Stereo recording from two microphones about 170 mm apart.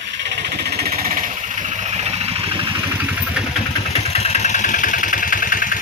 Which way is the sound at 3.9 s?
40° left (ahead or behind).